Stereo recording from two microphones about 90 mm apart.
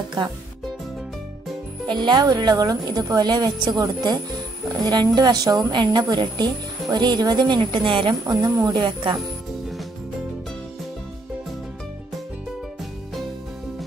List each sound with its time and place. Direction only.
1.9 s a woman's voice: 55° right (ahead or behind)